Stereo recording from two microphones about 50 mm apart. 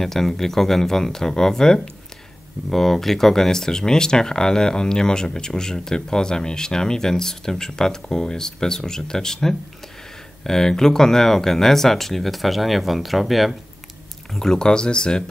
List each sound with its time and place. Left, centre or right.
0.0 s speech: centre
14.3 s speech: centre